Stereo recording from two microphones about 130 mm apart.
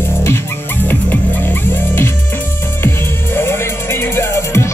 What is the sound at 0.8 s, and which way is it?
Music, 15° left (ahead or behind).